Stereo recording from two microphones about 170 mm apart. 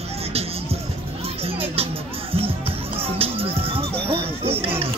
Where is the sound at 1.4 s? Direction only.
35° right (ahead or behind).